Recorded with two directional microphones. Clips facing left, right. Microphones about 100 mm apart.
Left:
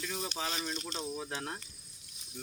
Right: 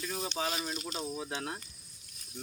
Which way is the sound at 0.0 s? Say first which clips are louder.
Right 1 dB; 10° right (ahead or behind).